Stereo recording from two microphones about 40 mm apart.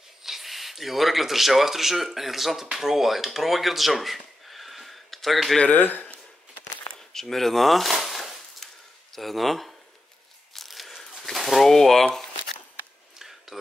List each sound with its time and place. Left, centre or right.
0.2 s speech: centre
5.7 s speech: left
7.0 s a sound: centre
9.1 s speech: centre
10.7 s a sound: centre
11.0 s pigeon: centre
13.5 s speech: centre